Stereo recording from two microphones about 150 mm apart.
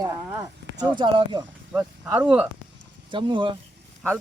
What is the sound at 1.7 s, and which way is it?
Speech, 10° right (ahead or behind).